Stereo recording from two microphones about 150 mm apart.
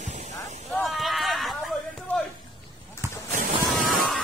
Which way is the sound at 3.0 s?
15° right (ahead or behind).